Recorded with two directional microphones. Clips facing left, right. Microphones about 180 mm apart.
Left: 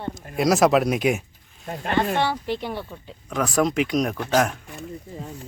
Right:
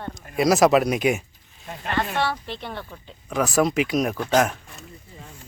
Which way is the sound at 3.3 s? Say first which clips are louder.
Right 1 dB; 5° right (ahead or behind).